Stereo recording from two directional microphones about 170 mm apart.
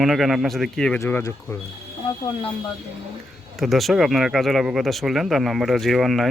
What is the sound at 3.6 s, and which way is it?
Speech, centre (ahead or behind).